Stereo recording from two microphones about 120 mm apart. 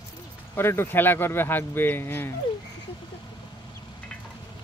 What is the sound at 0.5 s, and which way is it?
Speech, 20° left (ahead or behind).